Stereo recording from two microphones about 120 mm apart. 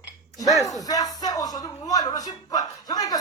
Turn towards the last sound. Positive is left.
turn(degrees=30)  # may be behind; listen again after turning